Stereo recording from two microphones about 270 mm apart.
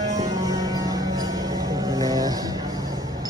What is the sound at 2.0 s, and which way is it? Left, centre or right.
Vehicle, centre.